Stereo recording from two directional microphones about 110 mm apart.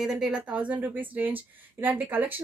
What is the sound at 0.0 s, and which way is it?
A woman's voice, 5° right (ahead or behind).